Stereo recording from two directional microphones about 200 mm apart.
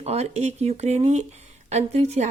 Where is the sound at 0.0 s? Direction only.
35° right (ahead or behind).